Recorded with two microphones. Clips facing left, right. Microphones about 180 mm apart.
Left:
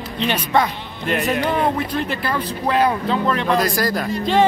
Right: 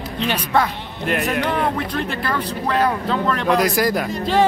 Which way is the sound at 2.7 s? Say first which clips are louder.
Left 1 dB; 5° left (ahead or behind).